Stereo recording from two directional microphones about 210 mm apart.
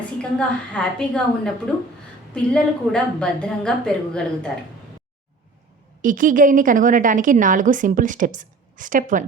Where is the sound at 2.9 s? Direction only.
5° left (ahead or behind).